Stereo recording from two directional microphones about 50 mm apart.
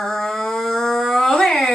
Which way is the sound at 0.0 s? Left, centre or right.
Centre.